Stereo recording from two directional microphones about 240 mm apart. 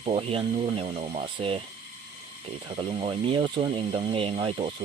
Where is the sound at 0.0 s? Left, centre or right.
Right.